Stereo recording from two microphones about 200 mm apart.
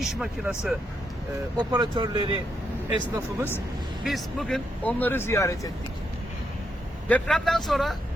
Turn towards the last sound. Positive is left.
turn(degrees=0)  # may be behind; listen again after turning